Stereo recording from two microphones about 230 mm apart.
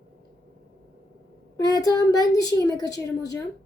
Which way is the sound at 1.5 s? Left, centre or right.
Centre.